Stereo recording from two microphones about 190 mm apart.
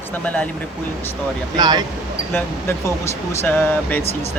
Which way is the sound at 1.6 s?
20° right (ahead or behind).